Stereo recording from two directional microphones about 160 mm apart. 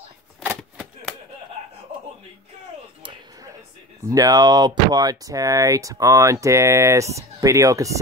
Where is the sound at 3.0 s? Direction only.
30° right (ahead or behind).